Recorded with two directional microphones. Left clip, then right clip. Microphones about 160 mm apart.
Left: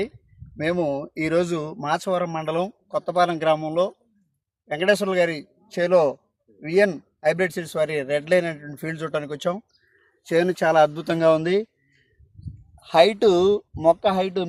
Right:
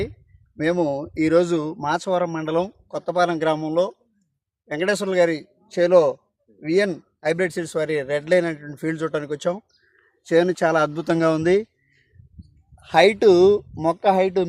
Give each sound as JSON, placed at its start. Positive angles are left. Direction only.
{"t": 0.5, "sound": "speech", "side_deg": -25}